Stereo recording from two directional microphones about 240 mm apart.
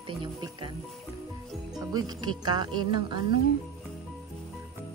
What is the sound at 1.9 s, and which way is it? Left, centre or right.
Speech, centre.